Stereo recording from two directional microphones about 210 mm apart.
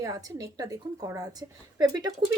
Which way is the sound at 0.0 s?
15° right (ahead or behind).